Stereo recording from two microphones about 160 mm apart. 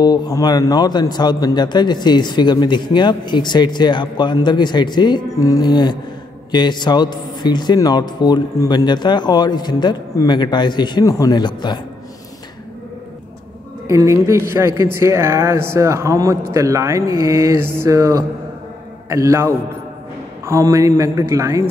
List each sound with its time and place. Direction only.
0.0 s a man's voice: 25° left (ahead or behind)
13.8 s speech: 20° right (ahead or behind)
16.5 s mantra: 20° right (ahead or behind)